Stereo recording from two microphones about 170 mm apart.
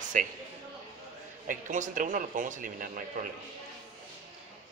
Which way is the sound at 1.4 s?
50° right (ahead or behind).